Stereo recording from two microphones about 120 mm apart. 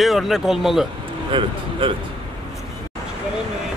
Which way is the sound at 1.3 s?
45° right (ahead or behind).